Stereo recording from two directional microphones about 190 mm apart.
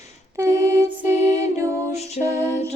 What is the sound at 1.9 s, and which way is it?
Music, 35° left (ahead or behind).